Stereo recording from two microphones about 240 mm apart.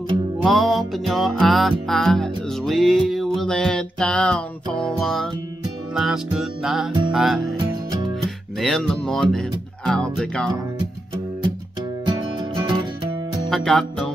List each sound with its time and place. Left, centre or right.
0.4 s music: centre
8.5 s music: centre
12.1 s music: centre
13.5 s music: centre